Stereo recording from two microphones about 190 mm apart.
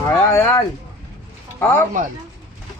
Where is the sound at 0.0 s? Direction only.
15° left (ahead or behind).